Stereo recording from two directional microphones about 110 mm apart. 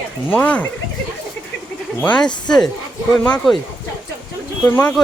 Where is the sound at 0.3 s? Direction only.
15° left (ahead or behind).